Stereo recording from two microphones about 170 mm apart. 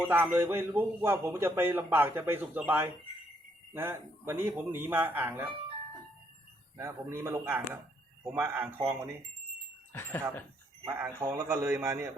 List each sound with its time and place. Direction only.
0.0 s a man's voice: 10° right (ahead or behind)
6.7 s a man's voice: 15° right (ahead or behind)
9.9 s speech: 15° left (ahead or behind)
10.8 s a man's voice: 10° right (ahead or behind)